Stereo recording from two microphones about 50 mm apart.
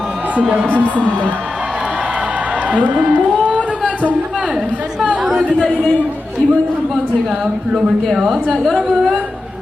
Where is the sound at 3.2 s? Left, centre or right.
Right.